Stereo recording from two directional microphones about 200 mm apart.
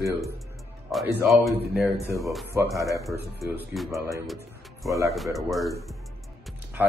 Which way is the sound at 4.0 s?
15° right (ahead or behind).